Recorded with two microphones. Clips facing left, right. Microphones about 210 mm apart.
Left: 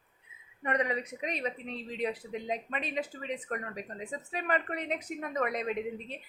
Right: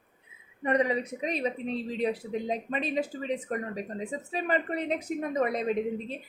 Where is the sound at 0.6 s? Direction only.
30° right (ahead or behind).